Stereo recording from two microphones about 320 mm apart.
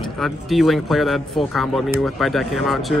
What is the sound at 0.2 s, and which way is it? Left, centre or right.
Speech, centre.